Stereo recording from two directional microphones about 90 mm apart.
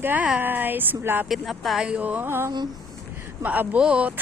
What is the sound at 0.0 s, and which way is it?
Speech, 20° right (ahead or behind).